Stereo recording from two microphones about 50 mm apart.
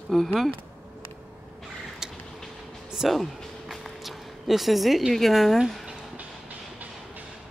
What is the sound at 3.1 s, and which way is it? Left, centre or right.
A woman's voice, centre.